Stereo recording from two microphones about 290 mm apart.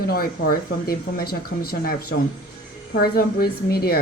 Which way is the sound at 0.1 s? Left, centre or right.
Left.